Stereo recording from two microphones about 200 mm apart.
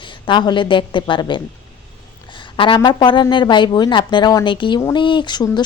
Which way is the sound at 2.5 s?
25° left (ahead or behind).